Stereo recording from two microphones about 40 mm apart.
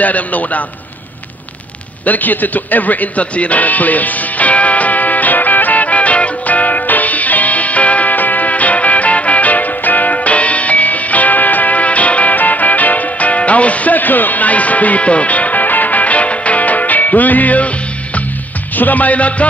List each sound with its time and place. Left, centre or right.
0.0 s a man's voice: left
2.0 s music: left
18.8 s a man's voice: left